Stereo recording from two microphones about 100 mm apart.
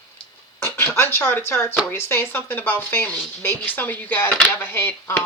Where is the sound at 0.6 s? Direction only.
25° left (ahead or behind).